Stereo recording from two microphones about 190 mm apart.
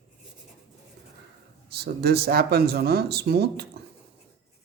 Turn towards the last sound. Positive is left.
turn(degrees=-55)  # may be behind; listen again after turning